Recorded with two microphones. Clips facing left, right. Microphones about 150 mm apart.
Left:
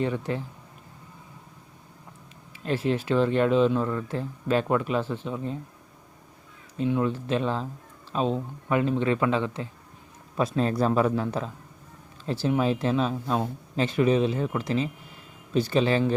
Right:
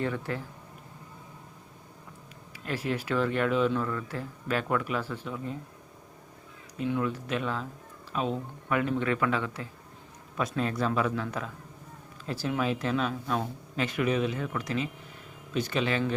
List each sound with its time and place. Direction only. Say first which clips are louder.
0.0 s speech: left 4 dB; 20° left (ahead or behind)
2.6 s speech: left 6 dB; 25° left (ahead or behind)
6.7 s speech: left 4 dB; 25° left (ahead or behind)